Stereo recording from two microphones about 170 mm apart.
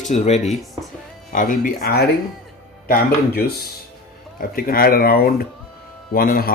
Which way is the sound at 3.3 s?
65° left (ahead or behind).